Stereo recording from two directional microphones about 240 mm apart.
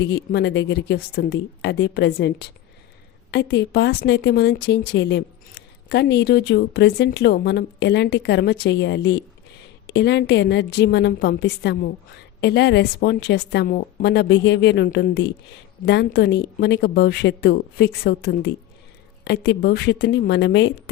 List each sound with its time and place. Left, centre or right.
0.0 s a woman's voice: left